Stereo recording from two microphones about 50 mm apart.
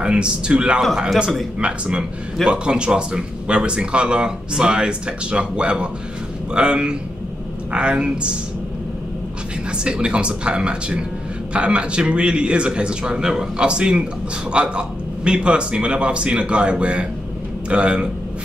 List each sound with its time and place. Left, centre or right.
0.0 s a man's voice: centre
9.7 s speech: centre